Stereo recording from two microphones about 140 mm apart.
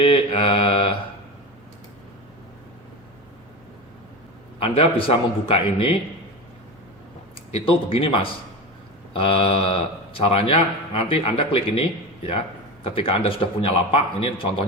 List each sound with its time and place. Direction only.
0.0 s speech: 40° left (ahead or behind)
4.6 s speech: 40° left (ahead or behind)
7.5 s speech: 40° left (ahead or behind)
12.8 s speech: 40° left (ahead or behind)